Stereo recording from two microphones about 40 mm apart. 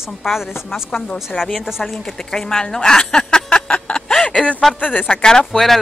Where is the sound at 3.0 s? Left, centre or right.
Left.